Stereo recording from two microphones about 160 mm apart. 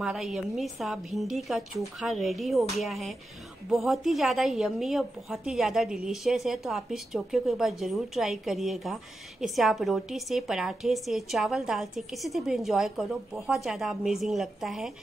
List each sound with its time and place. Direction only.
0.0 s a woman's voice: centre (ahead or behind)